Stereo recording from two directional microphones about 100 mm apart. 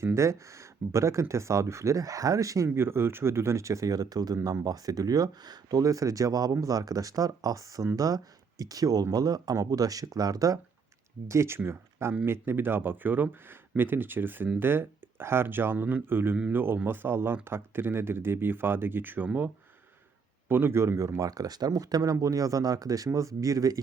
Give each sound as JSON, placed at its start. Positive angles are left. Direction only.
{"t": 0.0, "sound": "speech", "side_deg": -30}
{"t": 2.6, "sound": "speech", "side_deg": -25}
{"t": 11.3, "sound": "speech", "side_deg": -25}
{"t": 20.5, "sound": "speech", "side_deg": -25}